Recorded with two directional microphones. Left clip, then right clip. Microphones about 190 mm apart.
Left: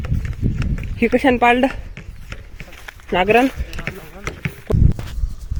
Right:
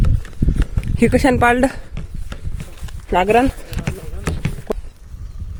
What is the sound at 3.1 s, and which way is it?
Speech, 5° right (ahead or behind).